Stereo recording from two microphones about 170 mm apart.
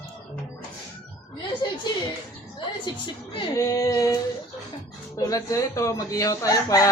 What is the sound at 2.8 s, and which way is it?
Speech, 30° left (ahead or behind).